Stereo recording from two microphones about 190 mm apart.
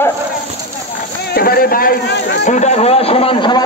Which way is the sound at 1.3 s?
50° left (ahead or behind).